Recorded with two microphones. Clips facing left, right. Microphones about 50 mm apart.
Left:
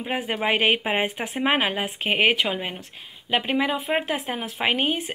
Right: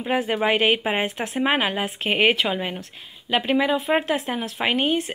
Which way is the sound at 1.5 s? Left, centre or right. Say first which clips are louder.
Left 1 dB; left.